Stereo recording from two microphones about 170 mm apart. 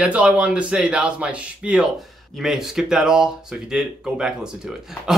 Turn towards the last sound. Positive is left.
turn(degrees=-5)  # may be behind; listen again after turning